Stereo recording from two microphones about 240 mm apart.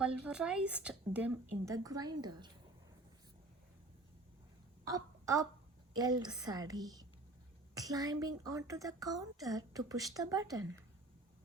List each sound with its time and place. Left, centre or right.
0.0 s speech: centre
4.9 s a woman's voice: centre